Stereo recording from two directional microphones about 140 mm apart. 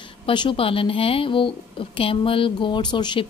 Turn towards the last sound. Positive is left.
turn(degrees=35)  # may be behind; listen again after turning